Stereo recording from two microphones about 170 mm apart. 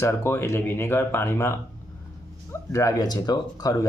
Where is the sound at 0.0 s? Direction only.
15° left (ahead or behind).